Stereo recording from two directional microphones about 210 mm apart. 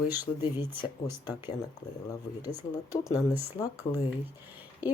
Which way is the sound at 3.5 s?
15° left (ahead or behind).